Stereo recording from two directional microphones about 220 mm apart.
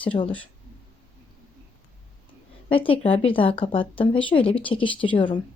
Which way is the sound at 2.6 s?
25° left (ahead or behind).